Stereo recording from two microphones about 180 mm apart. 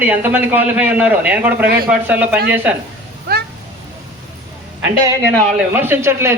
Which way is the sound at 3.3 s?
60° right (ahead or behind).